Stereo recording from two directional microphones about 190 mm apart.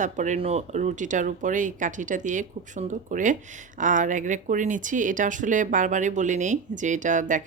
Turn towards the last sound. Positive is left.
turn(degrees=-45)  # may be behind; listen again after turning